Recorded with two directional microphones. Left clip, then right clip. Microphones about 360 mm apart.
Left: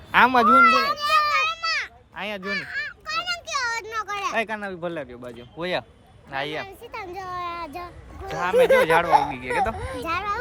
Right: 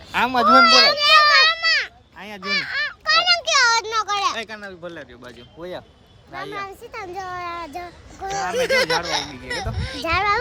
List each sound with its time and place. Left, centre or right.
0.1 s a child's voice: centre
0.5 s children playing: right
1.5 s a sound: centre
2.1 s honk: centre
2.4 s a sound: centre
4.4 s speech: centre
6.7 s speech: centre
8.3 s speech: centre
10.0 s a child's voice: centre